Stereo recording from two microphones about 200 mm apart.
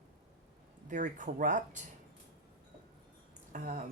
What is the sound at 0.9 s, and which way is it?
Speech, 40° right (ahead or behind).